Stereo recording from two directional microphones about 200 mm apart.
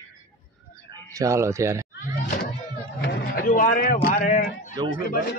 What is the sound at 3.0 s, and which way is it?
A man's voice, 45° left (ahead or behind).